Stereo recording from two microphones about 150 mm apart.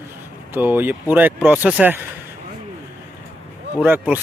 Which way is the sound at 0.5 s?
15° right (ahead or behind).